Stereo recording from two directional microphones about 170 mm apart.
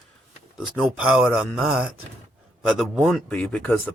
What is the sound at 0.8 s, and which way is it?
Speech, 5° right (ahead or behind).